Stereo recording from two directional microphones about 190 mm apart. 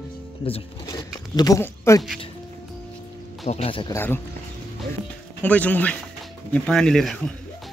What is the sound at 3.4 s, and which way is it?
Speech, 35° left (ahead or behind).